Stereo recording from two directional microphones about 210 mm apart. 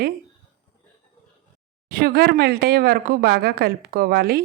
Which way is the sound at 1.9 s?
45° right (ahead or behind).